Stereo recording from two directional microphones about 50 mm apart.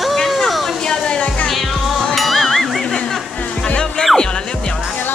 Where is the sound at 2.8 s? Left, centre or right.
Centre.